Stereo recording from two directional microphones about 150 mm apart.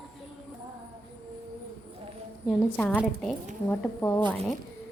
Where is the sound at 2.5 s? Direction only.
10° left (ahead or behind).